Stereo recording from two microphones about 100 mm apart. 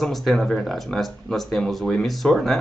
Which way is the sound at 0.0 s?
Centre (ahead or behind).